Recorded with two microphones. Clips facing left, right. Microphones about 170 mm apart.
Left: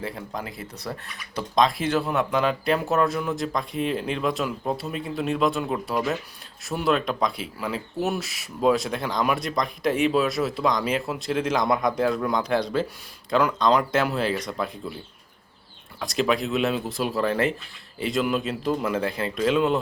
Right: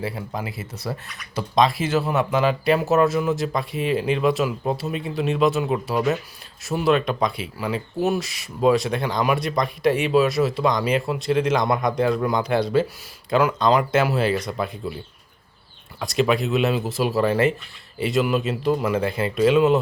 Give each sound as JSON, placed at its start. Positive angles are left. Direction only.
{"t": 0.0, "sound": "speech", "side_deg": -5}
{"t": 16.0, "sound": "speech", "side_deg": 0}